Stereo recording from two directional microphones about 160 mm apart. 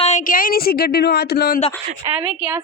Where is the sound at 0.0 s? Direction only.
50° left (ahead or behind); by 1.5 s 80° left.